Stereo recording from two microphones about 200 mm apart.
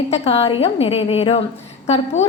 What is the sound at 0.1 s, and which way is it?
A woman's voice, 30° left (ahead or behind).